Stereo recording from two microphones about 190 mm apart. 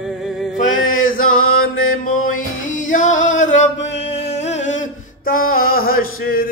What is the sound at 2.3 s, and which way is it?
Music, 90° left.